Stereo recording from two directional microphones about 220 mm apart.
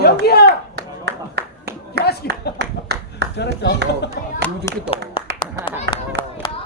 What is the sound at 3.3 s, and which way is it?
Speech, 50° left (ahead or behind).